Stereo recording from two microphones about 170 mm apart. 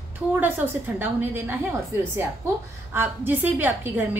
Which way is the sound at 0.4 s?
10° right (ahead or behind).